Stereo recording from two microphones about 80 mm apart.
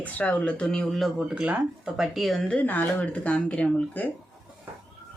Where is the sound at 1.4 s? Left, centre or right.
Centre.